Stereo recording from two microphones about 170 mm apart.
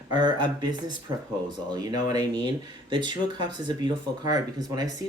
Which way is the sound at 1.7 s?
25° right (ahead or behind).